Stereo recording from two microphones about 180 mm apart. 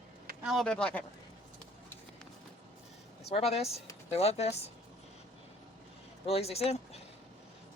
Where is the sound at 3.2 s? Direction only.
35° left (ahead or behind).